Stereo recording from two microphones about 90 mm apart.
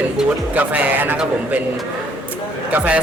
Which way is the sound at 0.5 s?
20° right (ahead or behind).